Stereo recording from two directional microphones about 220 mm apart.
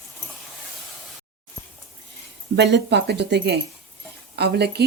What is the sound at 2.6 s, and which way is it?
A woman's voice, 50° right (ahead or behind).